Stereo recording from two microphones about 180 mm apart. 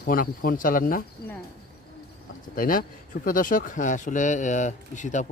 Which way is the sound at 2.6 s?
50° left (ahead or behind).